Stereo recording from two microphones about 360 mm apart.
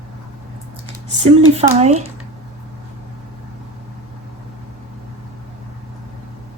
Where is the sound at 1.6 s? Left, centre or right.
Centre.